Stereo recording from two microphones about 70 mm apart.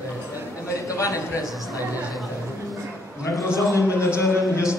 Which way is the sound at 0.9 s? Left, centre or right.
Left.